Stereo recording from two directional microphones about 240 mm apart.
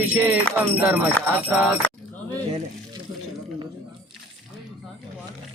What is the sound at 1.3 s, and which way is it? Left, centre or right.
Speech, centre.